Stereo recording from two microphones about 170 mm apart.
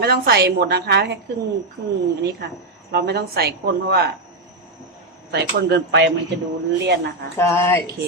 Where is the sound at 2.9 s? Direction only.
70° right (ahead or behind).